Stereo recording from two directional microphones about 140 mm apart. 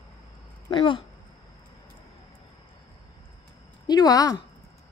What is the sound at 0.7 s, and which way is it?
Speech, 35° left (ahead or behind).